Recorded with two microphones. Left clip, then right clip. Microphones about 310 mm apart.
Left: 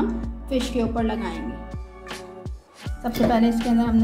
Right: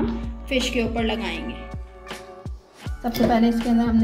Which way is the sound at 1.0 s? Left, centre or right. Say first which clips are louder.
Right 1 dB; centre.